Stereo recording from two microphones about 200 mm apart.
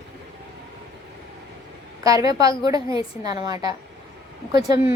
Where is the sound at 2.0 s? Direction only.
15° right (ahead or behind).